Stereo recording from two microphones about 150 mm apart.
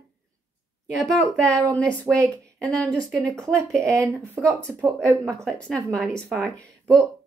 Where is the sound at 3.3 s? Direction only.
20° right (ahead or behind).